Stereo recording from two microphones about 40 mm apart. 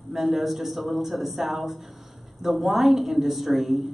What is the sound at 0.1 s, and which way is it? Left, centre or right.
A man's voice, centre.